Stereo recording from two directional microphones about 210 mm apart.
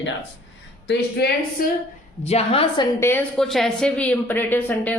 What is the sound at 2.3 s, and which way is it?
Speech, 30° left (ahead or behind).